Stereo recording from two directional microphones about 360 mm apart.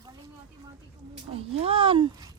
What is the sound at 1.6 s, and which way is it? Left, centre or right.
Speech, centre.